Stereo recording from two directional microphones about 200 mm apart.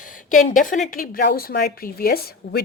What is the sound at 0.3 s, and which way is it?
A woman's voice, 40° left (ahead or behind).